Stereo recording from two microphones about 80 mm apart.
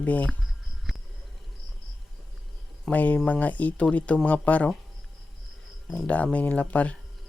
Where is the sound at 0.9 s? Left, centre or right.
Centre.